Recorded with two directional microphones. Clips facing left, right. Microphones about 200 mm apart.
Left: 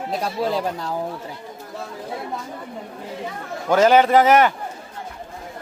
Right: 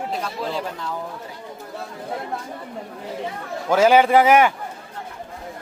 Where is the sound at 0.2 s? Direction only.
40° left (ahead or behind).